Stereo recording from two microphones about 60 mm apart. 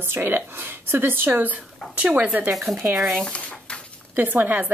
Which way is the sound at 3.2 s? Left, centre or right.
Centre.